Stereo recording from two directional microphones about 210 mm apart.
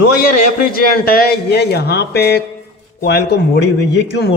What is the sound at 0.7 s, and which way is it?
A man's voice, 45° left (ahead or behind).